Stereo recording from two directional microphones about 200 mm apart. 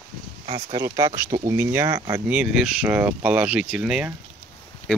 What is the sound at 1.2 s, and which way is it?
Speech, 15° right (ahead or behind).